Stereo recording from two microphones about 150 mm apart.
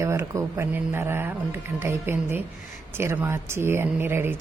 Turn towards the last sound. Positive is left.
turn(degrees=-15)  # may be behind; listen again after turning